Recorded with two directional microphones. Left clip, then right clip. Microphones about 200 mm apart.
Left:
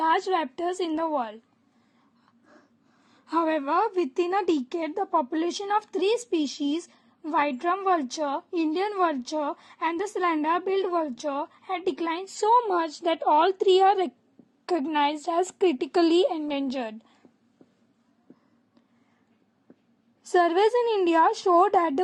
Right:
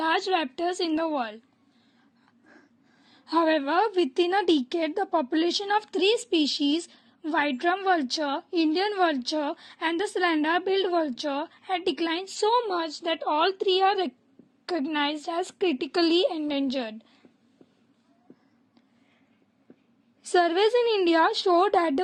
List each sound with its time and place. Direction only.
0.3 s a woman's voice: 10° left (ahead or behind)
3.1 s a woman's voice: 10° left (ahead or behind)
20.3 s a woman's voice: 10° left (ahead or behind)